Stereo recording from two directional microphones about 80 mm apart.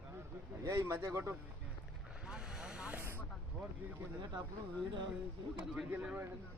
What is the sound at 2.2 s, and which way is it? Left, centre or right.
Vehicle, centre.